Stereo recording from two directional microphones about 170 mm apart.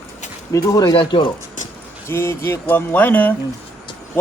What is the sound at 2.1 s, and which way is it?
A man's voice, 15° left (ahead or behind).